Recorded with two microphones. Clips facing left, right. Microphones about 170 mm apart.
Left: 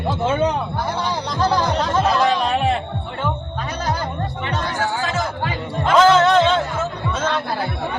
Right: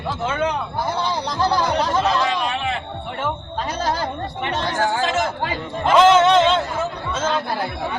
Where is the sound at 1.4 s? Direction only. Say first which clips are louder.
Left 1 dB; 10° right (ahead or behind).